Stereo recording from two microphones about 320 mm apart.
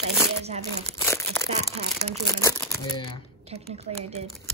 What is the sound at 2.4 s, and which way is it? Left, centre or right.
Speech, centre.